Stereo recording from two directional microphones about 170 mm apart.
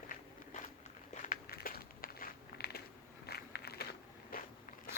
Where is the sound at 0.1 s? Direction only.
50° left (ahead or behind).